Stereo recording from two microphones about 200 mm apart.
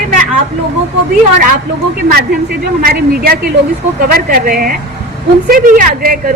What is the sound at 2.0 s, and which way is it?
A woman's voice, 50° right (ahead or behind).